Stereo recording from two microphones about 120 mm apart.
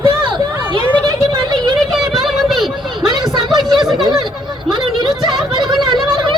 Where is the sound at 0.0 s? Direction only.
45° right (ahead or behind).